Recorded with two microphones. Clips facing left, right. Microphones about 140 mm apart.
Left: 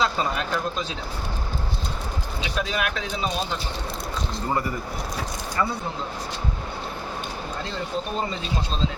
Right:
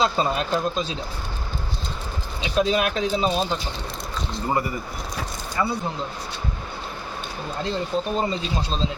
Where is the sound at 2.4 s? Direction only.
30° right (ahead or behind).